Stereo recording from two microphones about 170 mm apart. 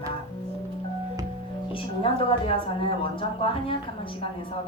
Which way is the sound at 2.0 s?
35° left (ahead or behind).